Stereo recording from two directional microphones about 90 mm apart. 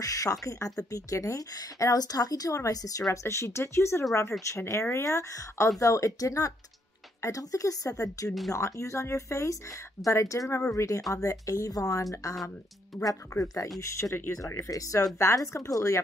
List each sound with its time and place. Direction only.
0.0 s a woman's voice: 40° left (ahead or behind)